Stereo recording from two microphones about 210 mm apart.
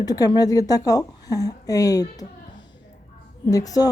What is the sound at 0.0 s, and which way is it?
Speech, 20° left (ahead or behind).